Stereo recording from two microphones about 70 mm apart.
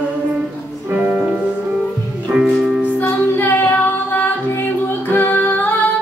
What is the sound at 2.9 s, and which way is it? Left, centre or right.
Music, left.